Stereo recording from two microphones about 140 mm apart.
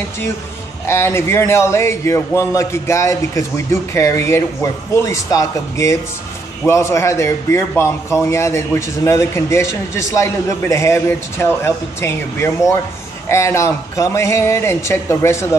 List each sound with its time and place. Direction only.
0.8 s a man's voice: 20° left (ahead or behind)